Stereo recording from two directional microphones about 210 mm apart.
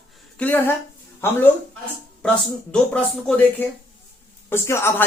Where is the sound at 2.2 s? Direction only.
5° left (ahead or behind).